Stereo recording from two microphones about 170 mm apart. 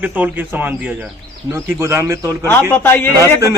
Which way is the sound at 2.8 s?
10° left (ahead or behind).